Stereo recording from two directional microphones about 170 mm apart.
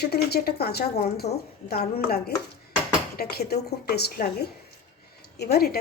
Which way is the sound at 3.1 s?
65° left (ahead or behind).